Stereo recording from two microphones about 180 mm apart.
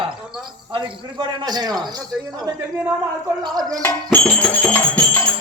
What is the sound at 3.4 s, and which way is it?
Speech, 20° right (ahead or behind).